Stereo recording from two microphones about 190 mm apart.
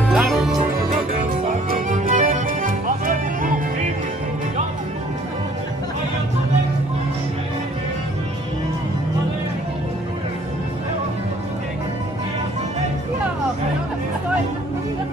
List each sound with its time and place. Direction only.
0.1 s music: 5° right (ahead or behind)
1.9 s music: 45° right (ahead or behind)